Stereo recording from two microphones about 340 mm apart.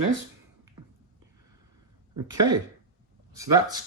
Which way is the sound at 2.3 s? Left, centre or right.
Centre.